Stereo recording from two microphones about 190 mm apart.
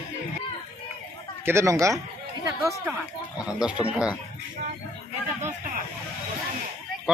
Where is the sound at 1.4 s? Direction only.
15° right (ahead or behind).